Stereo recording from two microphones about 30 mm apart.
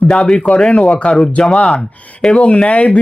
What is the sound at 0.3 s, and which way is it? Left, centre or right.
Speech, left.